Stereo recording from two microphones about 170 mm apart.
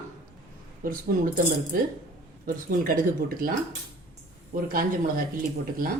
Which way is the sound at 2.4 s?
55° right (ahead or behind).